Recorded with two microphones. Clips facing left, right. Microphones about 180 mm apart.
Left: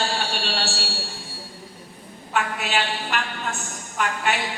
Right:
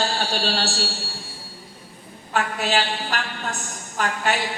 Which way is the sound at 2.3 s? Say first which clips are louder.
Right 2 dB; 35° right (ahead or behind).